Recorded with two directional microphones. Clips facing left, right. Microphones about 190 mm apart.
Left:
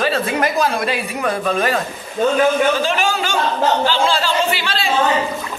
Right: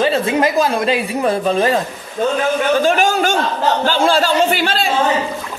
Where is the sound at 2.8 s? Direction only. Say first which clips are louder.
Right 5 dB; 50° right (ahead or behind).